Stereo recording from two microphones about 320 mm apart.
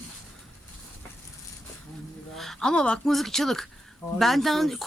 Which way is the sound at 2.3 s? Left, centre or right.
Centre.